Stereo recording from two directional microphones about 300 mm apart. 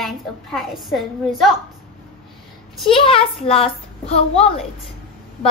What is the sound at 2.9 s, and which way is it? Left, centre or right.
Speech, centre.